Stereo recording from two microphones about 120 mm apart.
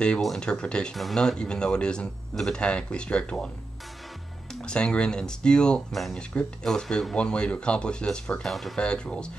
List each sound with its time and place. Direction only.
0.0 s speech: 5° left (ahead or behind)
4.6 s speech: 10° left (ahead or behind)